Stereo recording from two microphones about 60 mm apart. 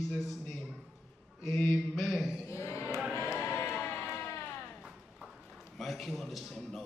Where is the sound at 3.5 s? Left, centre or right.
Left.